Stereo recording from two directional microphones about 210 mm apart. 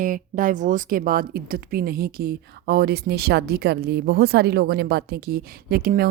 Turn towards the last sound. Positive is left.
turn(degrees=-45)  # may be behind; listen again after turning